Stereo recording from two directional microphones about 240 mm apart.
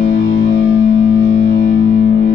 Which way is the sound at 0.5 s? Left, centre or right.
Left.